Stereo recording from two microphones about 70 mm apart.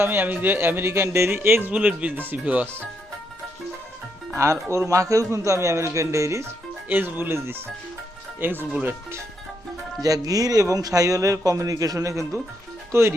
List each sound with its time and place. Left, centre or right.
0.0 s a man's voice: right
1.7 s speech: centre
4.7 s speech: right
6.8 s a man's voice: right
8.7 s speech: right
10.0 s speech: right